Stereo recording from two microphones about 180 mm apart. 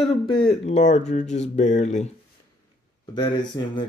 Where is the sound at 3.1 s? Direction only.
25° left (ahead or behind).